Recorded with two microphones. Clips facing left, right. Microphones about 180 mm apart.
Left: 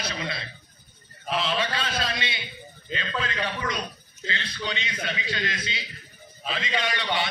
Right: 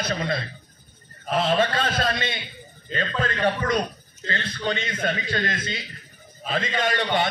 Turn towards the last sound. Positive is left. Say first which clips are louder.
# right 4 dB
turn(degrees=-50)  # may be behind; listen again after turning